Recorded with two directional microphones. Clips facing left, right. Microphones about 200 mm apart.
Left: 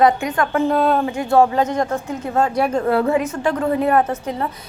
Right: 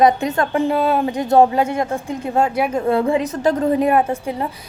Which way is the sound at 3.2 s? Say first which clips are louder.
Right 2 dB; 35° right (ahead or behind).